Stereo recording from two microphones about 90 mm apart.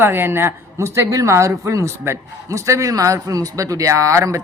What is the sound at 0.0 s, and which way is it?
A woman's voice, 25° right (ahead or behind).